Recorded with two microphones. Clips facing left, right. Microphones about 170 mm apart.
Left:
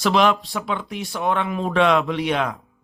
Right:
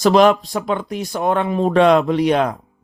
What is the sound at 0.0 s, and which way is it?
Speech, 40° right (ahead or behind).